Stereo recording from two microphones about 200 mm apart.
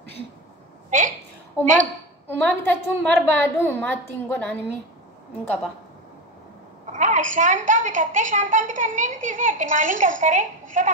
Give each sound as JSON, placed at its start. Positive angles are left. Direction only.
{"t": 0.8, "sound": "a woman's voice", "side_deg": -40}
{"t": 2.2, "sound": "a woman's voice", "side_deg": 5}
{"t": 6.9, "sound": "a woman's voice", "side_deg": -40}